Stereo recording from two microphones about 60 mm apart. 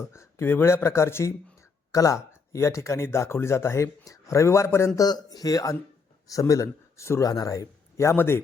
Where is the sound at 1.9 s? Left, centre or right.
Left.